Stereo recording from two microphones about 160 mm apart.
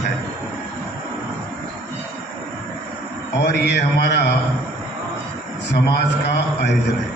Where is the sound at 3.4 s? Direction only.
85° left.